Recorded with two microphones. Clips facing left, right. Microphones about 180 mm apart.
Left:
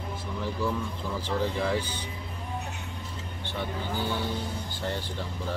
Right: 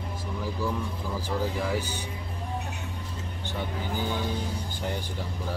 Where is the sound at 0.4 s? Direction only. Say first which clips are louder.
Left 1 dB; 10° right (ahead or behind).